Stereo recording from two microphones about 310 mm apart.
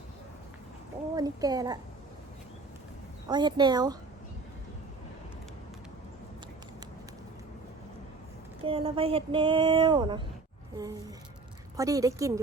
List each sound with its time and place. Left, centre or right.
1.1 s speech: centre
3.2 s speech: centre
8.6 s speech: centre